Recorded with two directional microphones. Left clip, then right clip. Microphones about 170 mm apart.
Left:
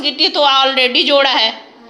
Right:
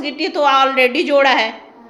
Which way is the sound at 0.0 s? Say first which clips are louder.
Left 4 dB; 20° right (ahead or behind).